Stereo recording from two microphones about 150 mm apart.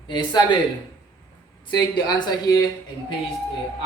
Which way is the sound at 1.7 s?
30° left (ahead or behind).